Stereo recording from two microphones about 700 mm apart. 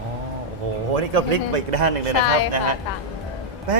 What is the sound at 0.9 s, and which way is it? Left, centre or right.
Speech, right.